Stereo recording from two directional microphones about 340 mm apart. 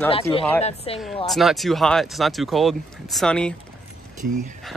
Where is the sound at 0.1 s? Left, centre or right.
Centre.